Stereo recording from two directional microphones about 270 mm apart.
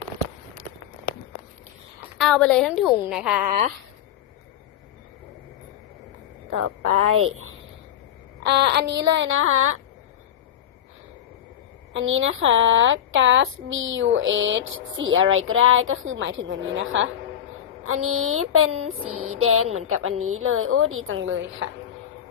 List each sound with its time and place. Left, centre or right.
2.1 s a woman's voice: centre
6.6 s speech: right
8.4 s child singing: right
11.9 s speech: right